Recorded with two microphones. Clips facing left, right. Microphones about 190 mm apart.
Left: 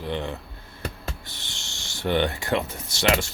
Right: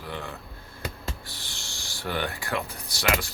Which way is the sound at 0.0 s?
25° left (ahead or behind).